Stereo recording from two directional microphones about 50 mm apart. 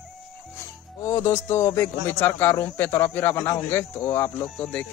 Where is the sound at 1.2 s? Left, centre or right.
Left.